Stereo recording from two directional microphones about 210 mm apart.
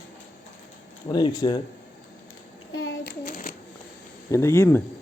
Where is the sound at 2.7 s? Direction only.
70° left (ahead or behind).